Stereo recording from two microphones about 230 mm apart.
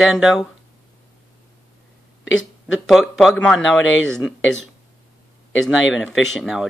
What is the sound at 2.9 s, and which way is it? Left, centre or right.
Speech, centre.